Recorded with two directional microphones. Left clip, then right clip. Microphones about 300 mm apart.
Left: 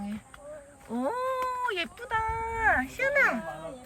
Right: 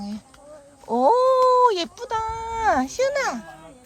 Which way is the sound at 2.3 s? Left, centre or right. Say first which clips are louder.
Right 4 dB; right.